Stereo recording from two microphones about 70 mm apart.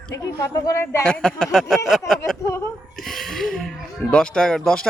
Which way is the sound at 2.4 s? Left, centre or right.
Left.